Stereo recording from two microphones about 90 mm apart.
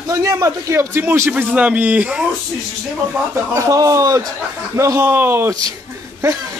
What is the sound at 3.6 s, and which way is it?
A man's voice, 40° right (ahead or behind).